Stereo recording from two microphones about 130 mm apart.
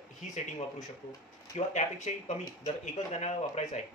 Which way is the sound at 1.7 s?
60° left (ahead or behind).